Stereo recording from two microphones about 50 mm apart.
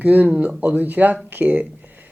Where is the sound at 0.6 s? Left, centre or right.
Right.